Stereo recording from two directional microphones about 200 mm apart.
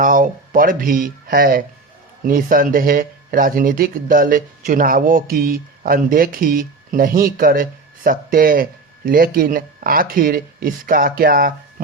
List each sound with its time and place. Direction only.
0.0 s speech: 45° right (ahead or behind)